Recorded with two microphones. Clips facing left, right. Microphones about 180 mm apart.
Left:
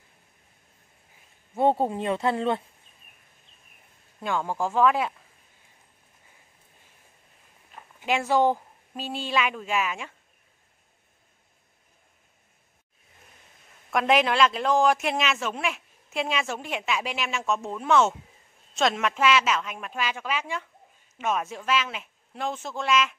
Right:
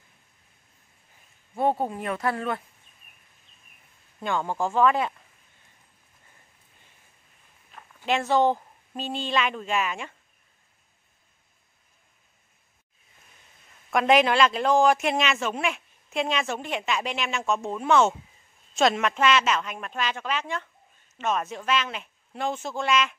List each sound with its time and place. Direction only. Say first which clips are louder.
1.6 s speech: left 2 dB; 25° left (ahead or behind)
4.2 s a man's voice: right 1 dB; 5° left (ahead or behind)
7.7 s speech: right 1 dB; 10° left (ahead or behind)
13.9 s a man's voice: right 2 dB; centre (ahead or behind)